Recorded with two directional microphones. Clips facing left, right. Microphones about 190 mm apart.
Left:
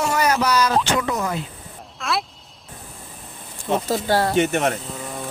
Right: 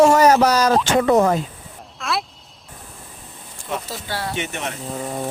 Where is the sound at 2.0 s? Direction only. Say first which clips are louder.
Even; centre (ahead or behind).